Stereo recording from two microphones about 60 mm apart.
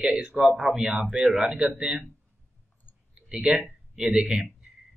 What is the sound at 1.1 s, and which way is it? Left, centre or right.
Speech, centre.